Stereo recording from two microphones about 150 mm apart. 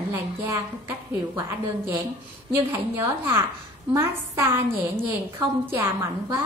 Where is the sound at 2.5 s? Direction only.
15° right (ahead or behind).